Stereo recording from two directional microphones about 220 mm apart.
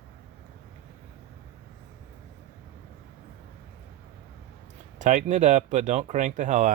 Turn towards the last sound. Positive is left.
turn(degrees=-35)  # may be behind; listen again after turning